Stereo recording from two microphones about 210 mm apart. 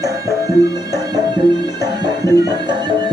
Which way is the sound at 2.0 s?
20° right (ahead or behind).